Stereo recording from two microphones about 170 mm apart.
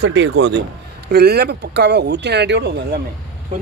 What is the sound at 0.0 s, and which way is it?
Speech, 85° right.